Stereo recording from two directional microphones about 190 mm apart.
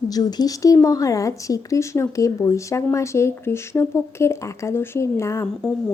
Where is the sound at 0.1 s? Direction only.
20° left (ahead or behind).